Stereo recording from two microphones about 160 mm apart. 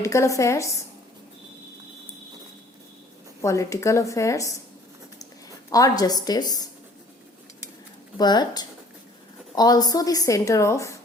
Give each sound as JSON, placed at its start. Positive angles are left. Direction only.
{"t": 0.0, "sound": "a woman's voice", "side_deg": 20}
{"t": 3.4, "sound": "a woman's voice", "side_deg": 20}
{"t": 5.7, "sound": "a woman's voice", "side_deg": 20}
{"t": 8.2, "sound": "a woman's voice", "side_deg": 25}